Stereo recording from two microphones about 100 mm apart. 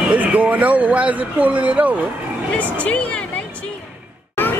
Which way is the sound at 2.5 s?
15° left (ahead or behind).